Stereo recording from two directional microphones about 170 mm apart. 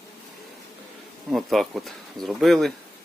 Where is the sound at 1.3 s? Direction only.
Centre (ahead or behind).